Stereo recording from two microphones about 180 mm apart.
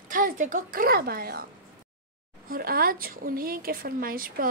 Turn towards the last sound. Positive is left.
turn(degrees=-55)  # may be behind; listen again after turning